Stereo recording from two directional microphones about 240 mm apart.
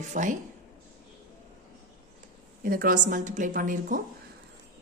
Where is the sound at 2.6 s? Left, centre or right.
Right.